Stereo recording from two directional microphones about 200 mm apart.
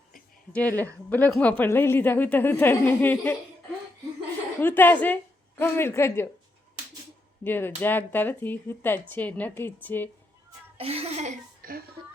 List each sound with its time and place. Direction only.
0.5 s speech: 10° left (ahead or behind)
4.6 s speech: 10° left (ahead or behind)
7.4 s speech: 10° left (ahead or behind)
10.8 s speech: 30° right (ahead or behind)